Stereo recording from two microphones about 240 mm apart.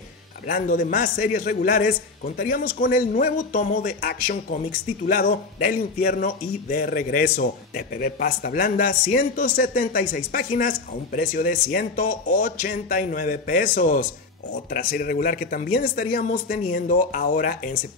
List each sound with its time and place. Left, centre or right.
0.5 s a man's voice: left